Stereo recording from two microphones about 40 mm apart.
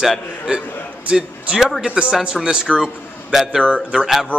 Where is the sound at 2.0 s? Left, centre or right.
Right.